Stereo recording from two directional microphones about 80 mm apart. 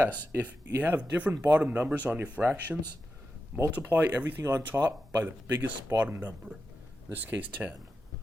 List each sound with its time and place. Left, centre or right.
0.0 s speech: right
4.4 s speech: right
4.9 s speech: right